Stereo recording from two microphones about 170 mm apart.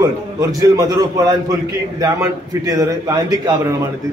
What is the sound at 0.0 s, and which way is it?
A man's voice, 20° right (ahead or behind).